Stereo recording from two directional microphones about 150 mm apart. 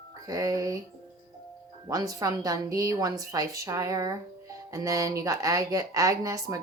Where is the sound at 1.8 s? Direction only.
25° right (ahead or behind).